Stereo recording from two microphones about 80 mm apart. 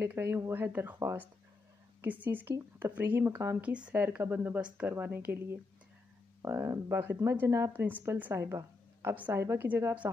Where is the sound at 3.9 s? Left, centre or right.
Right.